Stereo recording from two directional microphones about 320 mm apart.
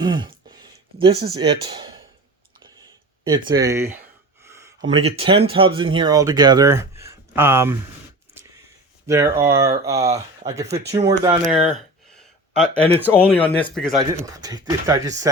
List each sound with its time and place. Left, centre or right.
0.0 s speech: centre
3.5 s speech: centre
4.4 s a sound: centre
4.9 s speech: centre
9.0 s speech: centre
12.1 s a sound: centre
13.1 s speech: centre
14.0 s speech: centre